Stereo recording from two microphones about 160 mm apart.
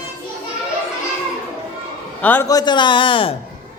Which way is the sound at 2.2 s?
10° left (ahead or behind).